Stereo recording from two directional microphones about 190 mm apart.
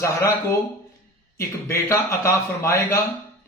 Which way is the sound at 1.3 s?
15° left (ahead or behind).